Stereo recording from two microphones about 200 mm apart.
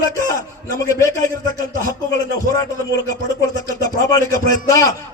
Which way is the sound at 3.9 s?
15° left (ahead or behind).